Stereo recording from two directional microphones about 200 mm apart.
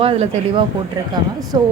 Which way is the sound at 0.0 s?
25° right (ahead or behind).